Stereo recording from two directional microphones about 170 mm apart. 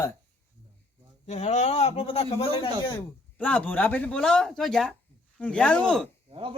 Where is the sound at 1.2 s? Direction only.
40° left (ahead or behind).